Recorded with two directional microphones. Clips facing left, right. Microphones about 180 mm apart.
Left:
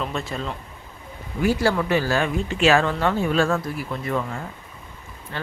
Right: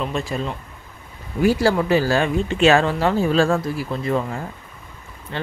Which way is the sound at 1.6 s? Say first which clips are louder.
Right 3 dB; 30° right (ahead or behind).